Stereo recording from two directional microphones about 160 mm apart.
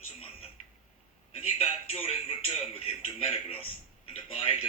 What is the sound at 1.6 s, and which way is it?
A man's voice, 35° left (ahead or behind).